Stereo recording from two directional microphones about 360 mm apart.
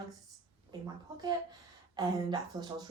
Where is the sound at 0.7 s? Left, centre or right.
Centre.